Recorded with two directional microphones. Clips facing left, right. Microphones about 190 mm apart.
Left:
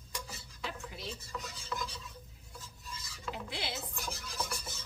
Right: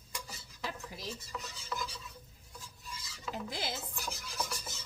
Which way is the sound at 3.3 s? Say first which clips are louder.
Right 2 dB; 45° right (ahead or behind).